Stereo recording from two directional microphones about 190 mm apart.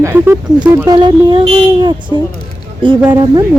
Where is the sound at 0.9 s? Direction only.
20° right (ahead or behind).